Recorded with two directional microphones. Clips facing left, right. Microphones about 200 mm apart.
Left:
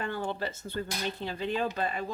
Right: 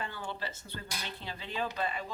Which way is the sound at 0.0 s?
50° left (ahead or behind).